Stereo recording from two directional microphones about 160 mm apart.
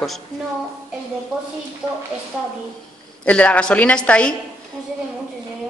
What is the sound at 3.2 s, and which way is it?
A woman's voice, 10° left (ahead or behind).